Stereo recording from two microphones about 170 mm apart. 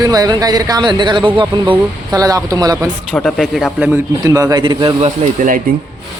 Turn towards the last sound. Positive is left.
turn(degrees=-50)  # may be behind; listen again after turning